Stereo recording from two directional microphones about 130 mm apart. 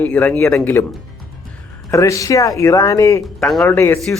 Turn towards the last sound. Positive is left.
turn(degrees=20)  # may be behind; listen again after turning